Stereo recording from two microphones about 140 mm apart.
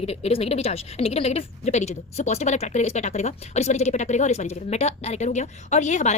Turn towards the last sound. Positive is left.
turn(degrees=60)  # may be behind; listen again after turning